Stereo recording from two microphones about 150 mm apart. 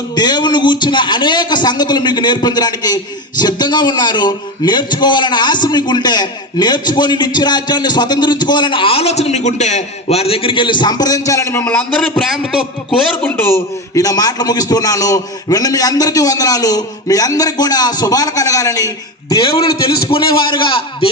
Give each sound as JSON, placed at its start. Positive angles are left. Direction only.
{"t": 0.2, "sound": "a man's voice", "side_deg": 30}
{"t": 11.6, "sound": "a man's voice", "side_deg": 5}
{"t": 13.2, "sound": "a man's voice", "side_deg": 15}